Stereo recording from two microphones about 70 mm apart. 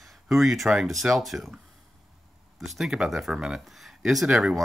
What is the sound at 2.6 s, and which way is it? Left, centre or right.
Speech, centre.